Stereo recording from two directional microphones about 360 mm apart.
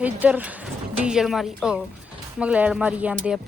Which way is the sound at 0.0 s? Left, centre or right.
Centre.